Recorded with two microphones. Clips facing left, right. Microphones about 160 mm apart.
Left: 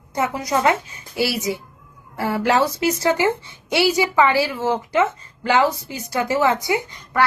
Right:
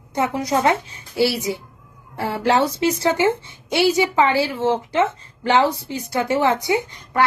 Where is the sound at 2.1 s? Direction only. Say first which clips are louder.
Even; 25° right (ahead or behind).